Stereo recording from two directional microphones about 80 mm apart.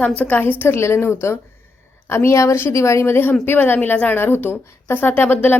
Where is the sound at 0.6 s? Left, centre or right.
Left.